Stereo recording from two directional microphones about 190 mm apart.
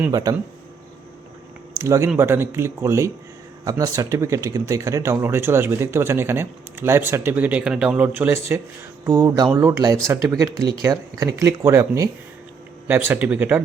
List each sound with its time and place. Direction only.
0.0 s speech: 20° right (ahead or behind)
1.8 s speech: 15° right (ahead or behind)